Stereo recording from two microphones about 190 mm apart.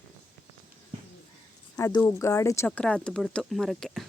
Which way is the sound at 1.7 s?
15° left (ahead or behind).